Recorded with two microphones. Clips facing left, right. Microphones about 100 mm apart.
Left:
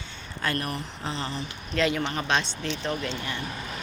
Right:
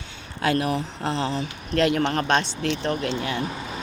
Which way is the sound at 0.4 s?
80° right.